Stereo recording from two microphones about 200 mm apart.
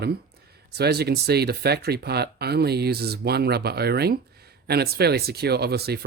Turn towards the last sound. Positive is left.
turn(degrees=-55)  # may be behind; listen again after turning